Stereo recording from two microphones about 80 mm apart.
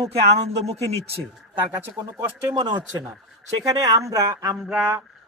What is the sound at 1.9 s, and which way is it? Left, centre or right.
Speech, right.